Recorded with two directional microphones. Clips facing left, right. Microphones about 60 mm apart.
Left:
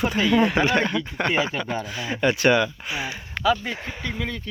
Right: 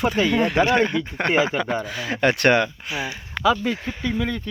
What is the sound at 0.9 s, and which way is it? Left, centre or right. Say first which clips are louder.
Speech: right 2 dB; right.